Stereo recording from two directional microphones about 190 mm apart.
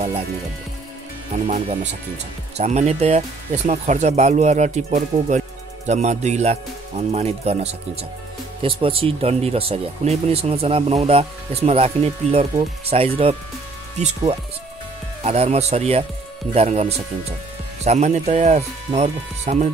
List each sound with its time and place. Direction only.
1.3 s speech: 35° right (ahead or behind)